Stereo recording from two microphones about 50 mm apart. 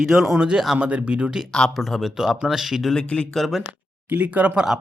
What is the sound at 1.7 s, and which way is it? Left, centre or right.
Speech, centre.